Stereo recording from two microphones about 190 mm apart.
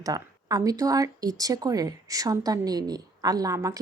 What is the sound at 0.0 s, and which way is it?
A woman's voice, 20° right (ahead or behind).